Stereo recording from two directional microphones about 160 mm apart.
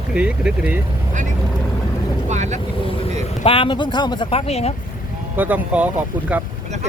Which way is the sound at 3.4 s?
35° left (ahead or behind).